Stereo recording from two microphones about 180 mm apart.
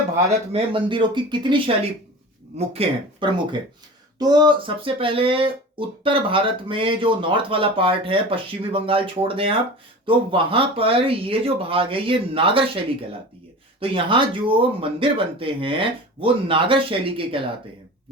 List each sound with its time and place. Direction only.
0.5 s speech: 30° right (ahead or behind)